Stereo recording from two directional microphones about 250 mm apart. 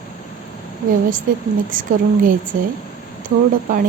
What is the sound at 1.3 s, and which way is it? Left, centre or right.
A woman's voice, right.